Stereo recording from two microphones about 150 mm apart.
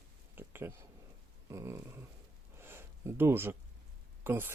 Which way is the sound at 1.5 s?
20° right (ahead or behind).